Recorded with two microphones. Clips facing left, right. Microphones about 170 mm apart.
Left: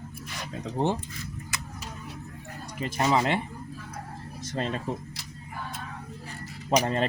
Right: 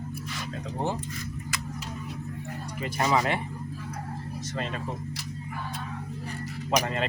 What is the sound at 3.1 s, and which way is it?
Speech, 25° left (ahead or behind).